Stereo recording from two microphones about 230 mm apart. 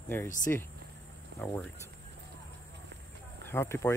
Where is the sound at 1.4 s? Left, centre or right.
Centre.